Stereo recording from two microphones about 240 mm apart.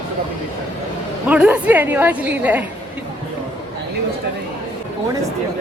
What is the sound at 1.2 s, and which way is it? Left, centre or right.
A woman's voice, centre.